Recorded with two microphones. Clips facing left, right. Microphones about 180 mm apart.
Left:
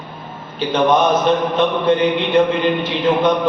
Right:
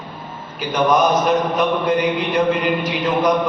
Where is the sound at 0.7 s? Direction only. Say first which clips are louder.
Left 1 dB; 30° left (ahead or behind).